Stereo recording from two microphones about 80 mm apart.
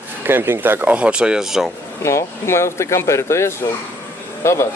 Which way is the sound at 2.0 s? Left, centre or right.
Left.